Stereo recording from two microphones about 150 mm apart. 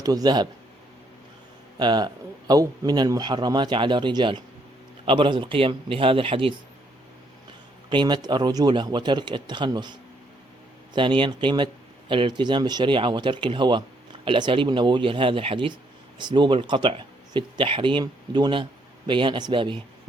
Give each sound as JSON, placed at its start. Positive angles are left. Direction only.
{"t": 0.0, "sound": "a man's voice", "side_deg": -25}
{"t": 1.8, "sound": "a man's voice", "side_deg": -30}
{"t": 7.9, "sound": "speech", "side_deg": -30}